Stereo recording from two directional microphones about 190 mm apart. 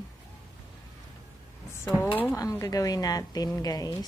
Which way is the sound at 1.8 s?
10° left (ahead or behind).